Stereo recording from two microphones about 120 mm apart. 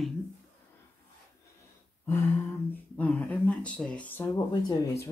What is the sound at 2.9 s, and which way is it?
Speech, 10° left (ahead or behind).